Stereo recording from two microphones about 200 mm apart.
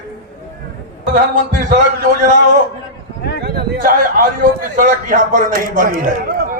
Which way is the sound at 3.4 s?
50° right (ahead or behind).